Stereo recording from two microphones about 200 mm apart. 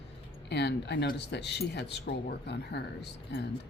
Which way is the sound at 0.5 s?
60° left (ahead or behind).